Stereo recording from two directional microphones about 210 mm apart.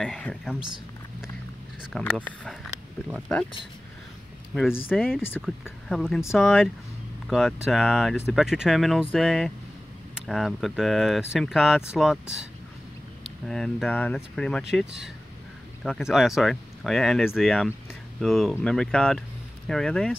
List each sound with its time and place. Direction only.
0.0 s speech: 5° left (ahead or behind)
1.8 s speech: centre (ahead or behind)
4.8 s speech: 5° left (ahead or behind)